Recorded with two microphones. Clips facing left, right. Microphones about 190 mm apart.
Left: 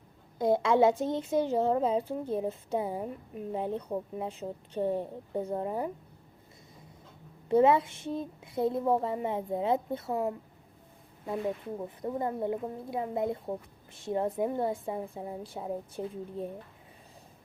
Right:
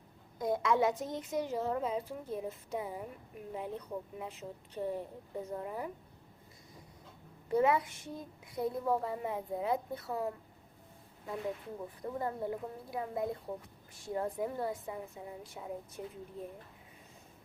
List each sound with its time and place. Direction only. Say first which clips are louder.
0.3 s speech: left 6 dB; 30° left (ahead or behind)
7.4 s speech: left 6 dB; 25° left (ahead or behind)